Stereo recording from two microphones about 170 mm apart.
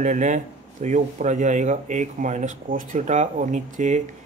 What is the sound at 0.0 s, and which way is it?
A man's voice, 45° right (ahead or behind).